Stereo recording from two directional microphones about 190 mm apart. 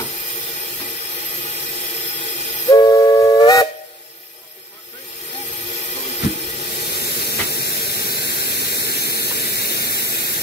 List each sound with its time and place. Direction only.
2.7 s steam whistle: 20° left (ahead or behind)
6.8 s steam: 55° left (ahead or behind)